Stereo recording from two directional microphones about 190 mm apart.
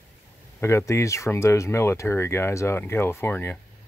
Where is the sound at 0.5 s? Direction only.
15° left (ahead or behind).